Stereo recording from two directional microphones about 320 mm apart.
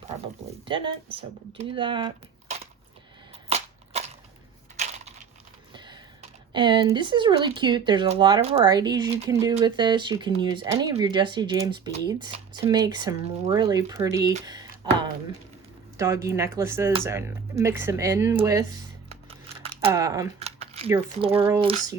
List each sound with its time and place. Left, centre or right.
0.6 s speech: centre
3.9 s a sound: centre
5.7 s computer keyboard: centre
6.5 s speech: centre
16.0 s speech: centre